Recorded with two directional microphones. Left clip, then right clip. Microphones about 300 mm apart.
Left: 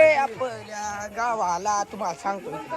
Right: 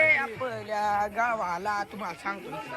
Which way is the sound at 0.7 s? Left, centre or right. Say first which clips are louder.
Right 5 dB; centre.